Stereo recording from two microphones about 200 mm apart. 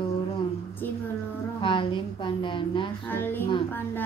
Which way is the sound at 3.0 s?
10° left (ahead or behind).